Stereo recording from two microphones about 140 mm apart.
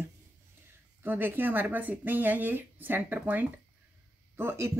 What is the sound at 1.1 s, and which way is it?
Speech, 15° right (ahead or behind).